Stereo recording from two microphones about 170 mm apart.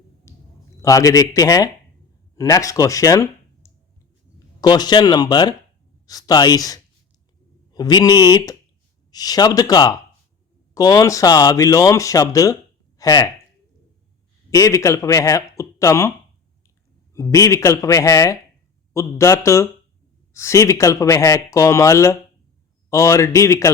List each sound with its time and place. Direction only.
0.3 s a sound: 15° left (ahead or behind)
0.8 s speech: 20° left (ahead or behind)
14.5 s speech: 20° left (ahead or behind)
17.2 s speech: 15° left (ahead or behind)